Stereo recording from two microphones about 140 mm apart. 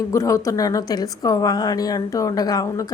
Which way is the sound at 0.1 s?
20° left (ahead or behind).